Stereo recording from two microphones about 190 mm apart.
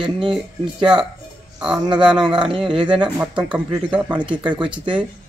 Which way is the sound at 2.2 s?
25° right (ahead or behind).